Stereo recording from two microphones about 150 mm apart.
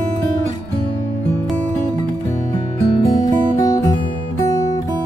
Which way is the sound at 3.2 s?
25° left (ahead or behind).